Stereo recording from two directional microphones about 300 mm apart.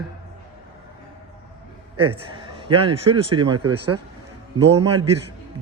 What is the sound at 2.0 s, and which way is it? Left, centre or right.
Speech, right.